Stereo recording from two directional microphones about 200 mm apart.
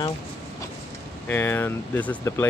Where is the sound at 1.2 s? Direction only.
10° left (ahead or behind).